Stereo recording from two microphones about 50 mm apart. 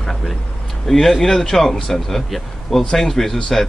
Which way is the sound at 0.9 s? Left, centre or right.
Centre.